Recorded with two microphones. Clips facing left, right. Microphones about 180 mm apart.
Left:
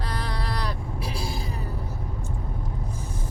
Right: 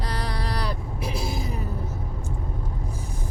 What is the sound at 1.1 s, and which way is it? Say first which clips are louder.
Speech: right 3 dB; 20° right (ahead or behind).